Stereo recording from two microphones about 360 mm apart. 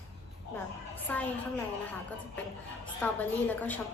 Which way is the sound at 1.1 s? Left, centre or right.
Centre.